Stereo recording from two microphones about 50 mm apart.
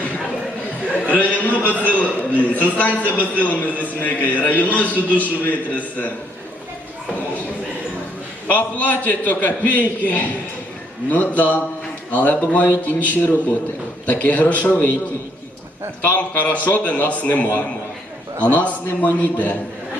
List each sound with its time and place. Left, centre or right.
1.1 s a man's voice: left
8.4 s a man's voice: left
16.0 s a man's voice: left